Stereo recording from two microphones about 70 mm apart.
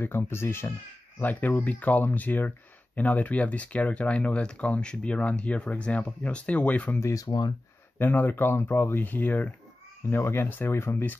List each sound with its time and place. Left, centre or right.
0.0 s speech: left
1.2 s speech: left
7.0 s speech: left
7.2 s speech: left
8.0 s speech: left